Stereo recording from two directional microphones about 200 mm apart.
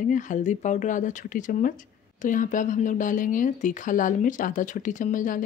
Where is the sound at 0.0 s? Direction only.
40° left (ahead or behind).